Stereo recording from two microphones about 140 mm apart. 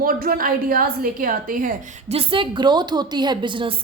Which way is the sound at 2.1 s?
40° right (ahead or behind).